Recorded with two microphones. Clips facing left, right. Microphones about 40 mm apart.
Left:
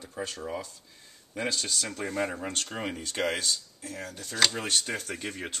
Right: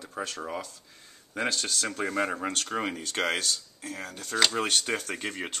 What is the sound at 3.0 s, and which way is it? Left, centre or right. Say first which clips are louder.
Speech: right 1 dB; right.